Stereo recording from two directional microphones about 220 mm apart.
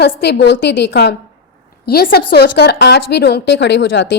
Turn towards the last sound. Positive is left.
turn(degrees=55)  # may be behind; listen again after turning